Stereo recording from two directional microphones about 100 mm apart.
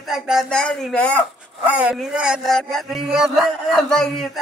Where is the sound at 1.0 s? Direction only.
15° left (ahead or behind).